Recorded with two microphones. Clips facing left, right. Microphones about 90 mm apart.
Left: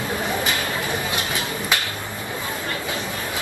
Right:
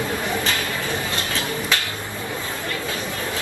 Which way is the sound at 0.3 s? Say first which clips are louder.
Even; 20° left (ahead or behind).